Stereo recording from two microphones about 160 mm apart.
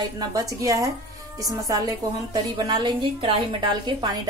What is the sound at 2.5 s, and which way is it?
A woman's voice, 30° right (ahead or behind).